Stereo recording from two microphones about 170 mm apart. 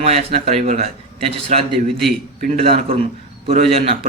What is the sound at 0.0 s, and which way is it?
A man's voice, 35° right (ahead or behind).